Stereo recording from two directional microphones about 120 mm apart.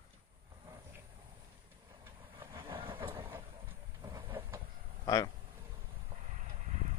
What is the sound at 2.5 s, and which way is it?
Vehicle, 45° right (ahead or behind).